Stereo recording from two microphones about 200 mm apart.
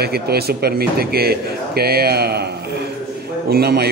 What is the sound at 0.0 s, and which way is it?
A man's voice, 50° right (ahead or behind).